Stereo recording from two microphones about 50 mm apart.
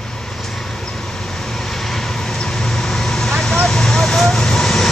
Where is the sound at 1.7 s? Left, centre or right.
Centre.